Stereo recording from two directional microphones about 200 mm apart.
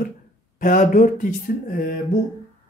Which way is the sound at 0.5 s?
40° left (ahead or behind).